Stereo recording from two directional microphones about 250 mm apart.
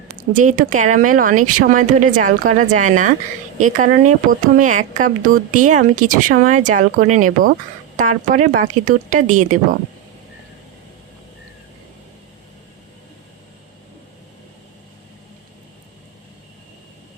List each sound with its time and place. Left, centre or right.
0.3 s speech: right